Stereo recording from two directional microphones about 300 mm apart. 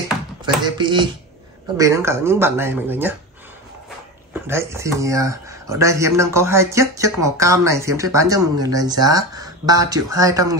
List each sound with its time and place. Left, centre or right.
0.7 s speech: centre
4.3 s speech: centre